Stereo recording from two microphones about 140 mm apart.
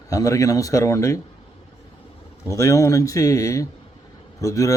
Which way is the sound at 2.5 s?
20° left (ahead or behind).